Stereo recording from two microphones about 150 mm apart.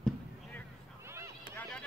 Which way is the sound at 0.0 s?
10° left (ahead or behind).